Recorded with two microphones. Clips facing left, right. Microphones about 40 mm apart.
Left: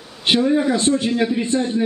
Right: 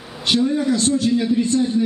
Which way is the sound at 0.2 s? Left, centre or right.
Left.